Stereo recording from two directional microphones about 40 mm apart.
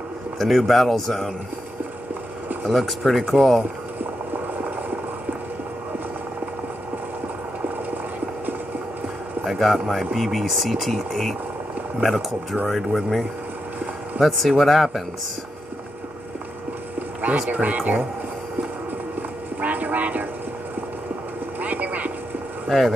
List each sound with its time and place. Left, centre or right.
0.4 s speech: centre
2.6 s speech: centre
9.4 s speech: centre
14.2 s speech: centre
17.5 s speech: right
19.6 s train: right
21.5 s a sound: right
22.7 s speech: centre